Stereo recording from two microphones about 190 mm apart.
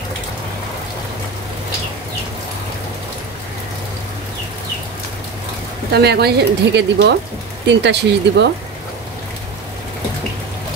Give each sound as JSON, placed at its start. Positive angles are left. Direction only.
{"t": 5.9, "sound": "a woman's voice", "side_deg": -55}